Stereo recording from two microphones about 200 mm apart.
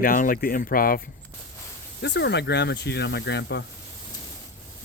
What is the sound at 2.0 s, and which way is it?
Speech, 60° left (ahead or behind).